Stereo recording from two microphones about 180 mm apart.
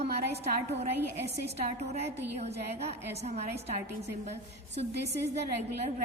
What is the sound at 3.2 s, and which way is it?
Speech, 35° right (ahead or behind).